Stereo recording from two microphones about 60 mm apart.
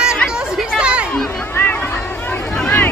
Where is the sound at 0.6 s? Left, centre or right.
Centre.